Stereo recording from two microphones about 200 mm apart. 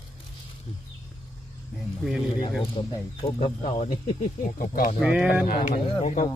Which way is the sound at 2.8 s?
30° left (ahead or behind).